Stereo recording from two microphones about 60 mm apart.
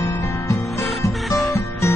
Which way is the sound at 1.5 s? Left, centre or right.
Left.